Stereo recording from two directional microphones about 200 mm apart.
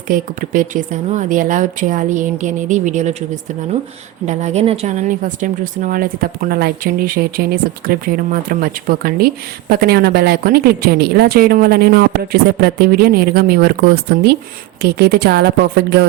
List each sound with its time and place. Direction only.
0.1 s a woman's voice: 40° right (ahead or behind)
4.3 s a woman's voice: 35° right (ahead or behind); by 16.0 s 55° right (ahead or behind)